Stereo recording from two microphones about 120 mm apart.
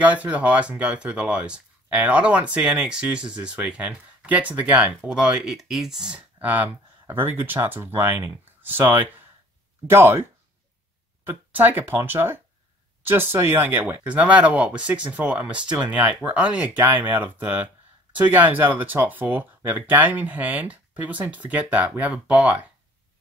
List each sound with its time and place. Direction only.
0.0 s speech: 10° right (ahead or behind)
11.2 s speech: 15° right (ahead or behind)